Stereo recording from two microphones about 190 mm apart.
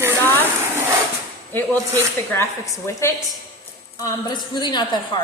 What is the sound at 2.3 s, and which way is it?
A woman's voice, 15° left (ahead or behind).